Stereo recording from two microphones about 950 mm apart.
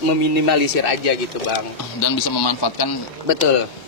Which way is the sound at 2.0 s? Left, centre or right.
Left.